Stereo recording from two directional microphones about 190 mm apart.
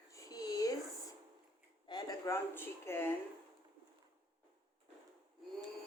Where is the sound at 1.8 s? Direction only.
20° left (ahead or behind).